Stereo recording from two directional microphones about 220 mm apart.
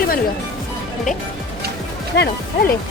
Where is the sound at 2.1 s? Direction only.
50° left (ahead or behind).